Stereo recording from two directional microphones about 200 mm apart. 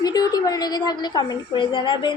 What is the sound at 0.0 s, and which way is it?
A woman's voice, 20° left (ahead or behind).